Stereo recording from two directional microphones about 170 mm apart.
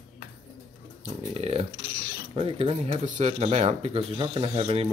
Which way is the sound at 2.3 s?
35° right (ahead or behind).